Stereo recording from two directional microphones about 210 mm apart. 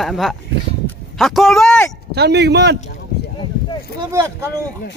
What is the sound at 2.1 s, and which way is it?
Speech, 50° right (ahead or behind).